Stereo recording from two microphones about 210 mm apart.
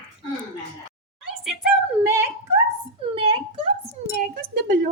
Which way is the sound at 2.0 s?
10° right (ahead or behind).